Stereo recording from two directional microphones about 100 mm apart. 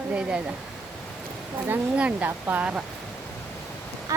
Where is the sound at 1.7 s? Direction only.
15° right (ahead or behind).